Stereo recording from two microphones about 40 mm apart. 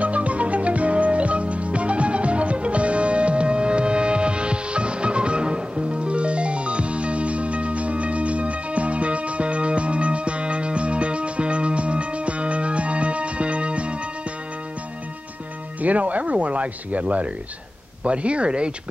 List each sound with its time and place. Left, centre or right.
0.0 s music: right
15.8 s speech: right